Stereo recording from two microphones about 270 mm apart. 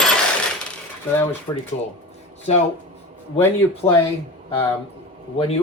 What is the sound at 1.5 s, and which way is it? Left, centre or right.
Speech, centre.